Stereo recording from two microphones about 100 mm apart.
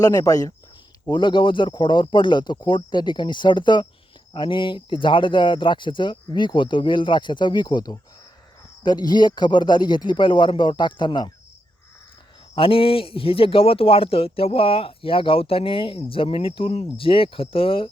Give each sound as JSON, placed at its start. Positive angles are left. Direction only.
{"t": 0.0, "sound": "speech", "side_deg": 35}
{"t": 1.1, "sound": "speech", "side_deg": 55}
{"t": 12.5, "sound": "a man's voice", "side_deg": 65}